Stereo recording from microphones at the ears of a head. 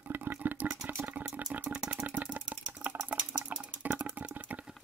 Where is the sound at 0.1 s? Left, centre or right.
Right.